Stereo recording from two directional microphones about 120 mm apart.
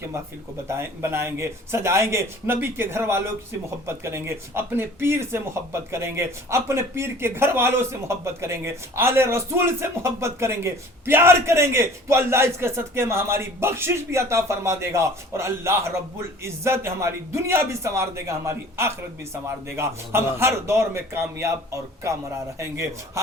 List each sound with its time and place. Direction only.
0.7 s speech: 20° right (ahead or behind)